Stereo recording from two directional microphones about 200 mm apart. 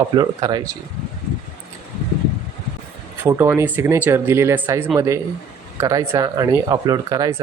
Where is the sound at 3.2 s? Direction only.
10° right (ahead or behind).